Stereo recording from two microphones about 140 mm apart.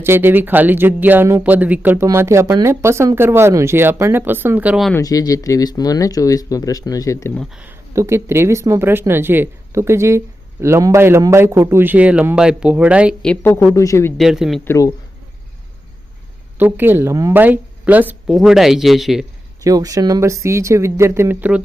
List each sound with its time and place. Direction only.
0.0 s speech: 15° right (ahead or behind)
4.9 s speech: 25° left (ahead or behind)
7.5 s speech: 15° right (ahead or behind)
13.2 s a woman's voice: 10° left (ahead or behind)
14.2 s a man's voice: 5° right (ahead or behind)
14.6 s speech: 20° left (ahead or behind)
16.6 s a man's voice: 15° right (ahead or behind)
19.6 s speech: 25° right (ahead or behind)